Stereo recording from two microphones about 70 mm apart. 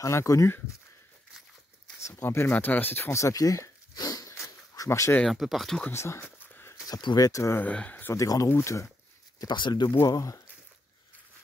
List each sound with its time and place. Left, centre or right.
0.0 s speech: left
2.0 s speech: left
3.2 s a sound: left
4.8 s speech: left
5.3 s speech: centre
5.9 s speech: left
6.9 s speech: left
7.2 s speech: left
7.6 s speech: centre
8.1 s speech: left
9.4 s speech: left
10.0 s speech: left